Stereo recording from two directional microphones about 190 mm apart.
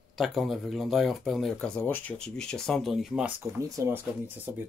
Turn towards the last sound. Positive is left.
turn(degrees=-10)  # may be behind; listen again after turning